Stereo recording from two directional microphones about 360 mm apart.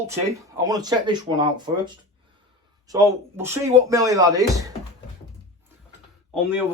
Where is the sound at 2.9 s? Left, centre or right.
Centre.